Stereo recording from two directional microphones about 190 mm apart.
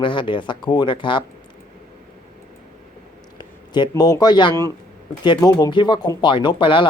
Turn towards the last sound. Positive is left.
turn(degrees=25)  # may be behind; listen again after turning